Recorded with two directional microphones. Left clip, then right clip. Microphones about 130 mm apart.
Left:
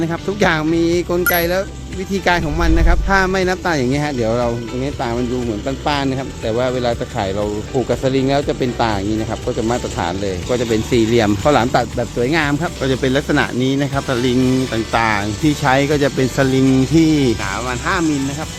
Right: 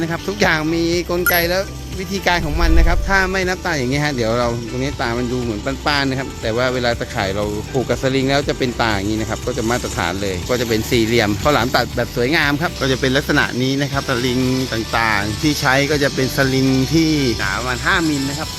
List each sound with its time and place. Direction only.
0.0 s speech: 20° left (ahead or behind)
3.9 s speech: 10° left (ahead or behind)
10.0 s speech: 10° left (ahead or behind); by 17.3 s 30° left (ahead or behind)
17.4 s speech: centre (ahead or behind)